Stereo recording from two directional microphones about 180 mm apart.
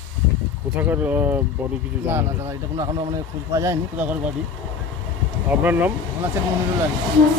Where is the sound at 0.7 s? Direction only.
10° right (ahead or behind).